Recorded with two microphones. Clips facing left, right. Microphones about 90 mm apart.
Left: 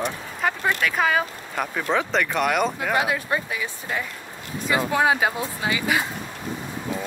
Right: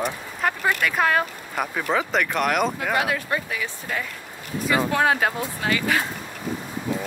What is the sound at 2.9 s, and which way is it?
Speech, 20° left (ahead or behind).